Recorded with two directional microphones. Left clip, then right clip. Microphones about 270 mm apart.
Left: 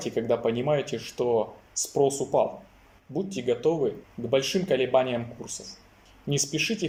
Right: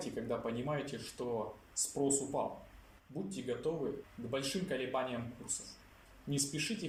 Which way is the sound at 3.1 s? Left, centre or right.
Left.